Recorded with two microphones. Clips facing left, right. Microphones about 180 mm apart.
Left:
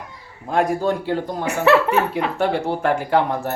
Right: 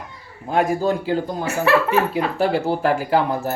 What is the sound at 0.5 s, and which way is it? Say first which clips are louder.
Speech: even; centre (ahead or behind).